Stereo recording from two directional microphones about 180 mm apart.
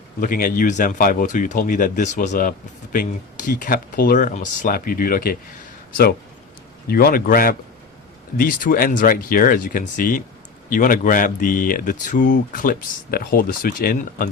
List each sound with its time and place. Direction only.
0.2 s speech: 50° left (ahead or behind)
6.8 s speech: 55° left (ahead or behind)